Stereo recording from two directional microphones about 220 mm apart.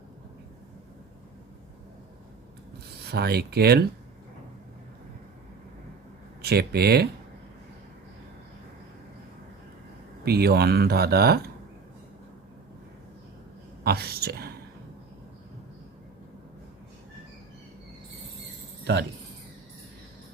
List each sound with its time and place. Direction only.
3.0 s speech: 45° right (ahead or behind)
6.4 s speech: 45° right (ahead or behind)
10.2 s speech: 45° right (ahead or behind)
13.8 s a woman's voice: 45° right (ahead or behind)